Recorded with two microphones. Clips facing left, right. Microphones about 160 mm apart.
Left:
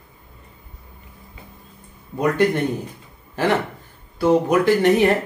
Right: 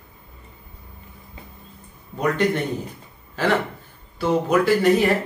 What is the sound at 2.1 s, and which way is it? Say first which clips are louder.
A man's voice: left 3 dB; 15° left (ahead or behind).